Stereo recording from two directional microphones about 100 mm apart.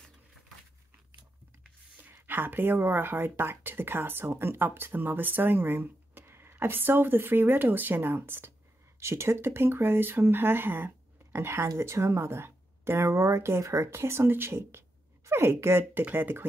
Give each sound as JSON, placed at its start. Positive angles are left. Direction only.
{"t": 2.0, "sound": "speech", "side_deg": -20}